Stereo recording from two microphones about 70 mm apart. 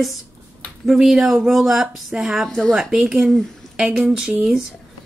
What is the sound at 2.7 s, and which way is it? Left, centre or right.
Speech, centre.